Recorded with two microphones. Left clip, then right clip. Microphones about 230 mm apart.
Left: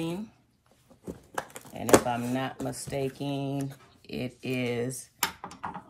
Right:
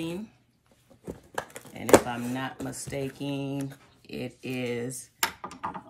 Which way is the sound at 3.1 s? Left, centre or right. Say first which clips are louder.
Even; left.